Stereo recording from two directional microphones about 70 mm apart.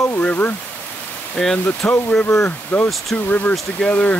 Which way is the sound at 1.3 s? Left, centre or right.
Centre.